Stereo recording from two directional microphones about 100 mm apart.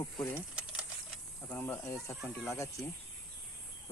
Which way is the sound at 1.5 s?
20° left (ahead or behind).